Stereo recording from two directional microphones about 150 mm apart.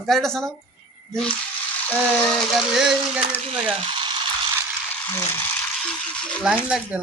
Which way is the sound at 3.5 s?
35° right (ahead or behind).